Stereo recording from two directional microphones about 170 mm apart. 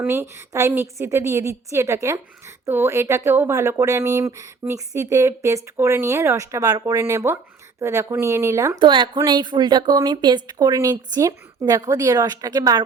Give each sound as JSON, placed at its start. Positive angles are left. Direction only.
{"t": 0.0, "sound": "speech", "side_deg": -15}
{"t": 8.8, "sound": "speech", "side_deg": -30}